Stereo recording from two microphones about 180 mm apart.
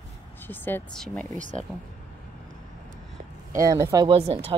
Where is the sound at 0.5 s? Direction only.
10° left (ahead or behind).